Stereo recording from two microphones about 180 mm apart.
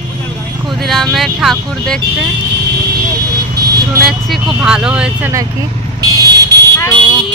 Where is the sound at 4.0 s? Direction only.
Centre (ahead or behind).